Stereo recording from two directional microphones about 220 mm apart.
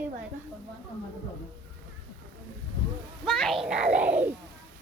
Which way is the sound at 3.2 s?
Centre (ahead or behind).